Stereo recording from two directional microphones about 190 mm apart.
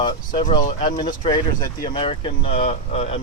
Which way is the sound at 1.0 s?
25° left (ahead or behind).